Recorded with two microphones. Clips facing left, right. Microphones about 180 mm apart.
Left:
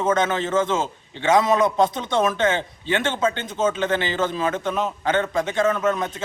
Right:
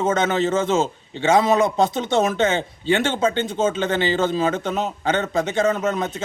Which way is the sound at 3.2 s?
25° right (ahead or behind).